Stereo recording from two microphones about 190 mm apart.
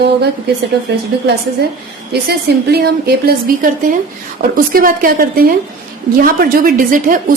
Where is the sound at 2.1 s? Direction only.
55° right (ahead or behind).